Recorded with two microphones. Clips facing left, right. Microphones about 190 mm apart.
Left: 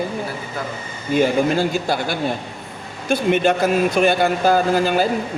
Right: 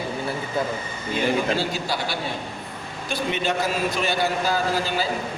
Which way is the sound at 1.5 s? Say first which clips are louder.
Left 6 dB; 50° left (ahead or behind).